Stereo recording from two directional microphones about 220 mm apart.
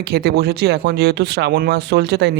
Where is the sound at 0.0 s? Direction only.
45° right (ahead or behind).